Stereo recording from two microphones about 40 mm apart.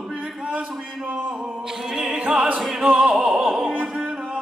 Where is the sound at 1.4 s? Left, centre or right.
Centre.